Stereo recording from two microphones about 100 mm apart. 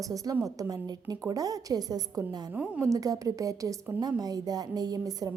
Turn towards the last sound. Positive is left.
turn(degrees=-40)  # may be behind; listen again after turning